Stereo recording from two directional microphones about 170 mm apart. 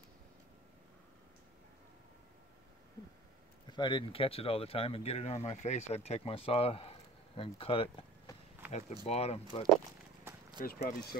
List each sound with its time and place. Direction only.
3.7 s speech: 30° left (ahead or behind)
9.0 s speech: 35° left (ahead or behind)
10.6 s speech: 60° left (ahead or behind)